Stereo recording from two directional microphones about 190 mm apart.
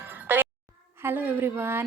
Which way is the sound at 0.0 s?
10° right (ahead or behind).